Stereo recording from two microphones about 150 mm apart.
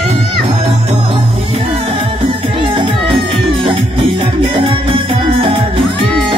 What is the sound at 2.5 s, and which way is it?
Music, 35° right (ahead or behind).